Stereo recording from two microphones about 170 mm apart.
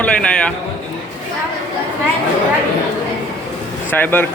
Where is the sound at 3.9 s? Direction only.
10° left (ahead or behind).